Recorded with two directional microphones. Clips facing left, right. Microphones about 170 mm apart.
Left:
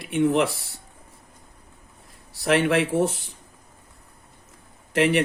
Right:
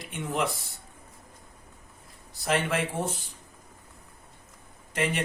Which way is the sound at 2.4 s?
70° left (ahead or behind).